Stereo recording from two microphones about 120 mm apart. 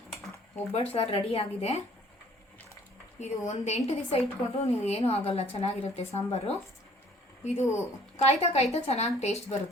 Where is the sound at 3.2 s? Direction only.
65° left (ahead or behind).